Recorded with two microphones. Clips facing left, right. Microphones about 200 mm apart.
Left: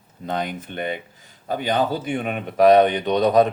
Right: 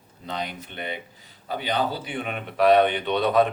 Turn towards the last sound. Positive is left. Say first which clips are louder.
# left 4 dB
turn(degrees=40)  # may be behind; listen again after turning